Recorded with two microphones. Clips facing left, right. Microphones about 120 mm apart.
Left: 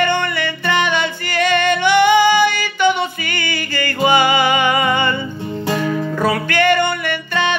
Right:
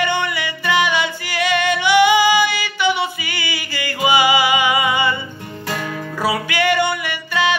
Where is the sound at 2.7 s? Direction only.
10° right (ahead or behind).